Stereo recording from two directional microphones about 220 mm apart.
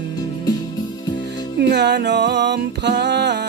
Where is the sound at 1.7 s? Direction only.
50° right (ahead or behind).